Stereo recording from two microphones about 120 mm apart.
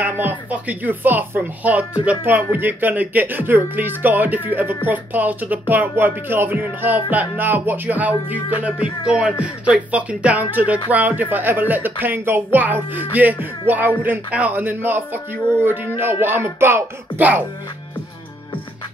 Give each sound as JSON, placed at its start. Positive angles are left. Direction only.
{"t": 0.0, "sound": "speech", "side_deg": -15}